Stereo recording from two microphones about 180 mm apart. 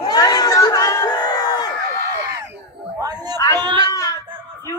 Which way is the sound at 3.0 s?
20° right (ahead or behind).